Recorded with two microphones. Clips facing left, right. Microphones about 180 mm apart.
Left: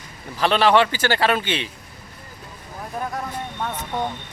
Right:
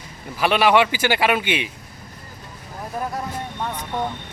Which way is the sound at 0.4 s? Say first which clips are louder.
Even; 10° right (ahead or behind).